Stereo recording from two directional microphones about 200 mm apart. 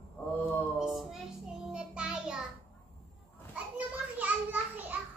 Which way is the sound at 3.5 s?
5° right (ahead or behind).